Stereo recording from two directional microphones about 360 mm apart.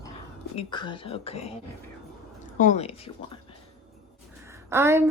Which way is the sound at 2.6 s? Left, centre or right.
Centre.